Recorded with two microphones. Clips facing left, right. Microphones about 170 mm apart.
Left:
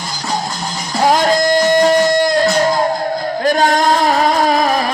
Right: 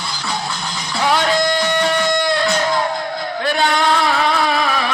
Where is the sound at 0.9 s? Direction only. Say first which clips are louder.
Left 4 dB; 40° left (ahead or behind).